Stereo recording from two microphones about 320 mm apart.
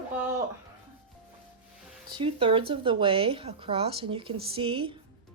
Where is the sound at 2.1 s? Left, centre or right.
Centre.